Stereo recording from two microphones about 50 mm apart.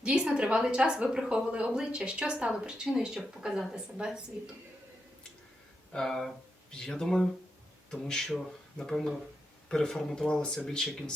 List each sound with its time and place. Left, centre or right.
0.0 s a woman's voice: right
5.9 s speech: centre